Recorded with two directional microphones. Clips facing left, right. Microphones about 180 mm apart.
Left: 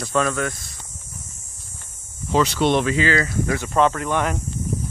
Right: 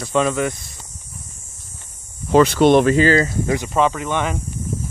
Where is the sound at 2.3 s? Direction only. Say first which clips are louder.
Right 6 dB; 55° right (ahead or behind).